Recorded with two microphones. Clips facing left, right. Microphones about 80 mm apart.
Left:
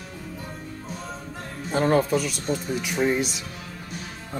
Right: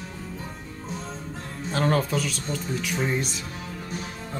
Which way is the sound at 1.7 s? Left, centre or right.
Centre.